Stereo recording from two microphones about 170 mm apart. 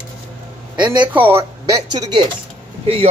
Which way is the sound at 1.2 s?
15° right (ahead or behind).